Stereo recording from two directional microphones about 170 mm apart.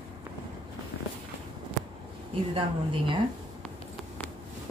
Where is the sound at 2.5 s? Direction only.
30° right (ahead or behind).